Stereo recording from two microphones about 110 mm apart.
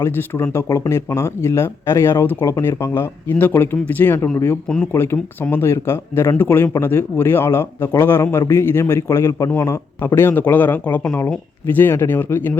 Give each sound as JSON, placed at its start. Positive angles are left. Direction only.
{"t": 0.0, "sound": "speech", "side_deg": 25}